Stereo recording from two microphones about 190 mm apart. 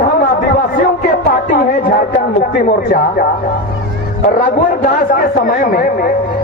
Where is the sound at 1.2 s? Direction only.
50° left (ahead or behind).